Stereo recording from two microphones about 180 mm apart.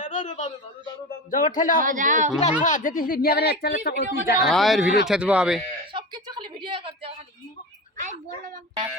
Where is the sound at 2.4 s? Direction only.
40° left (ahead or behind); by 4.0 s 65° left (ahead or behind).